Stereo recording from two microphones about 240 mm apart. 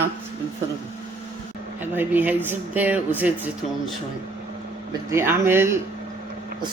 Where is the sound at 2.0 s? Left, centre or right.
Centre.